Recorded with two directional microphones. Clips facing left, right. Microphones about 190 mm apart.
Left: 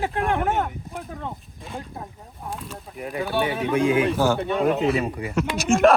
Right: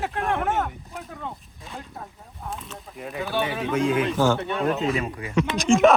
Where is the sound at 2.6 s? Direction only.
Centre (ahead or behind).